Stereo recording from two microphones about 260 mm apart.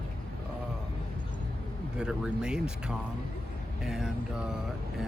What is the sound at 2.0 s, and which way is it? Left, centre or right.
Speech, centre.